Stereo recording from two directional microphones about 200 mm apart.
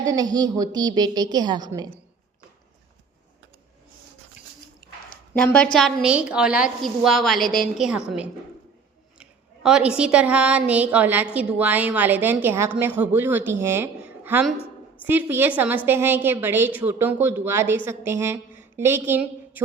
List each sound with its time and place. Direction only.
0.0 s a woman's voice: 20° right (ahead or behind)
4.8 s a sound: 50° left (ahead or behind)
5.3 s a woman's voice: 10° left (ahead or behind)
9.6 s a woman's voice: 5° right (ahead or behind)